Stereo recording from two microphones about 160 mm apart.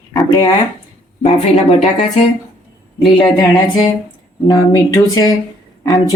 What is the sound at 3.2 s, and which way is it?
Speech, 25° left (ahead or behind).